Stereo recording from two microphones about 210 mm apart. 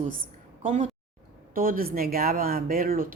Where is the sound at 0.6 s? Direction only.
35° right (ahead or behind).